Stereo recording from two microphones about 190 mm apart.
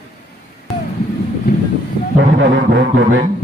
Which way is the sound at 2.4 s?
65° right (ahead or behind).